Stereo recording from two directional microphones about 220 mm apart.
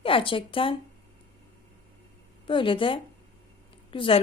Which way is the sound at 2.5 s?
25° left (ahead or behind).